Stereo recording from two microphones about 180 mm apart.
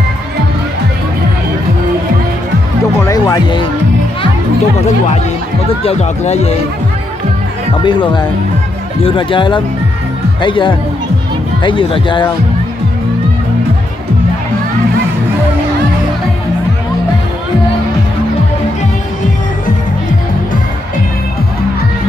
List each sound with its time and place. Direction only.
3.1 s music: 20° left (ahead or behind)
5.9 s speech: 35° left (ahead or behind)
7.8 s speech: 25° left (ahead or behind)